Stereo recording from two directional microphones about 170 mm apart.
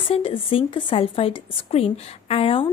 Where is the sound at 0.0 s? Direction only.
30° left (ahead or behind).